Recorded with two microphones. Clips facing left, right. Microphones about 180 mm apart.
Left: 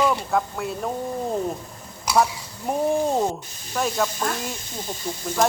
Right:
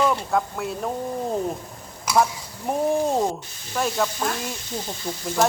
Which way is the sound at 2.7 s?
Centre (ahead or behind).